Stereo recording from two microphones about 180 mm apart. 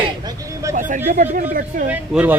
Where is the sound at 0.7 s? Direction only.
45° right (ahead or behind).